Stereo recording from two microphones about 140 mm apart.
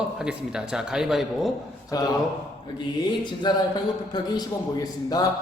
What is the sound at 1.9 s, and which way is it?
Speech, 30° left (ahead or behind).